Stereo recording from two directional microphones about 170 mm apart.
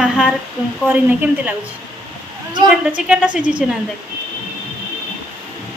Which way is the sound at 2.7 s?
5° right (ahead or behind).